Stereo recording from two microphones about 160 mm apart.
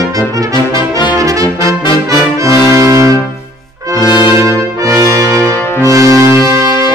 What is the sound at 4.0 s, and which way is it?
Brass instrument, 25° left (ahead or behind).